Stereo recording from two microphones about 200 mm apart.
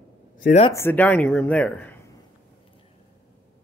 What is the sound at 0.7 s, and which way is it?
Speech, 10° left (ahead or behind).